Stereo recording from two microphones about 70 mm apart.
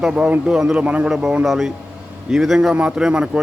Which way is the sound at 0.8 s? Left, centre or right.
Centre.